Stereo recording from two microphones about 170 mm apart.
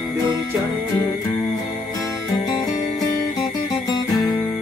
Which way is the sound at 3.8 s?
25° left (ahead or behind).